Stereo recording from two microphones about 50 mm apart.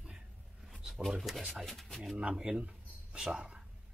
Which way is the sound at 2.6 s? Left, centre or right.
Centre.